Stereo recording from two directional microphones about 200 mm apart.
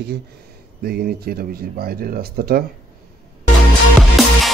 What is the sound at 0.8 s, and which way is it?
Speech, 50° right (ahead or behind).